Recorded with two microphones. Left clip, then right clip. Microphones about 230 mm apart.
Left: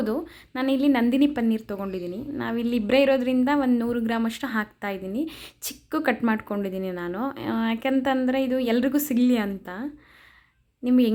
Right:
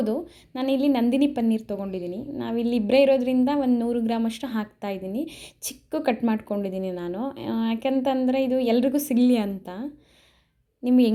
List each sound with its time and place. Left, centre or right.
0.0 s a woman's voice: centre